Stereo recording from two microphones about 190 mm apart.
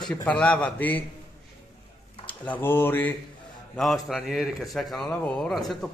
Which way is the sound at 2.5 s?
10° left (ahead or behind).